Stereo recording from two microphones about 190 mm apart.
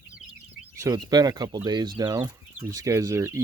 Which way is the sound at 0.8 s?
20° right (ahead or behind).